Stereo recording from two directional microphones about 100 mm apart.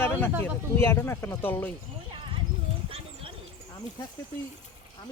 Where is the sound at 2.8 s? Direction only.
65° right (ahead or behind).